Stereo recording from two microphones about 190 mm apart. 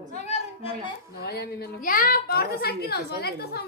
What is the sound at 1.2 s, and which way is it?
A woman's voice, 60° left (ahead or behind).